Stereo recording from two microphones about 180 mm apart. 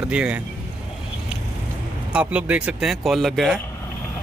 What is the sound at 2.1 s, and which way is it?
Speech, 5° right (ahead or behind).